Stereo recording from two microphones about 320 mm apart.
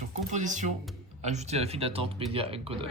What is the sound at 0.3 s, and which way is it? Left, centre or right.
Speech, right.